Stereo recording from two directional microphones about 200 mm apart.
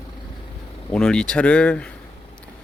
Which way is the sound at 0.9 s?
5° left (ahead or behind).